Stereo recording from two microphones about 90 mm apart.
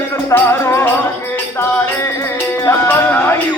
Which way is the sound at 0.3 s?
25° left (ahead or behind).